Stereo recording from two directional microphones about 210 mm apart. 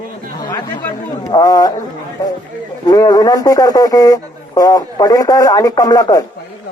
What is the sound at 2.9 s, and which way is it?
Speech, 15° left (ahead or behind).